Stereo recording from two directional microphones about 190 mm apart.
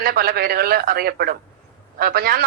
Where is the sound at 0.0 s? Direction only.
55° right (ahead or behind).